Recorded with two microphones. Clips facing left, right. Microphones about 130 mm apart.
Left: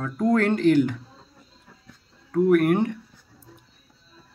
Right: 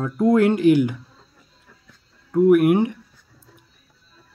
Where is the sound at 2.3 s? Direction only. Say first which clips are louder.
Right 4 dB; 10° right (ahead or behind).